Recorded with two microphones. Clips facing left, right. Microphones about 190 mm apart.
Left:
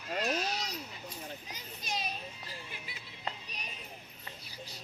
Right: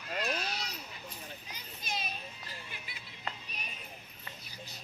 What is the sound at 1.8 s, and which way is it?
Children playing, 40° left (ahead or behind).